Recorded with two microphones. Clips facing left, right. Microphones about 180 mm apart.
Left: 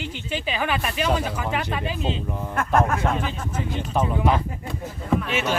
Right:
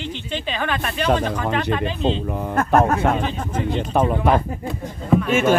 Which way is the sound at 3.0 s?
60° right (ahead or behind).